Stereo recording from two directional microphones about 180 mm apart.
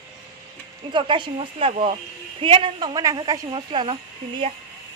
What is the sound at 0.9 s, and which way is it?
A woman's voice, 25° right (ahead or behind).